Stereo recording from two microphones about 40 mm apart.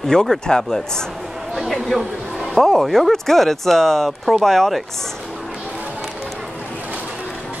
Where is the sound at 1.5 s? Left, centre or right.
Centre.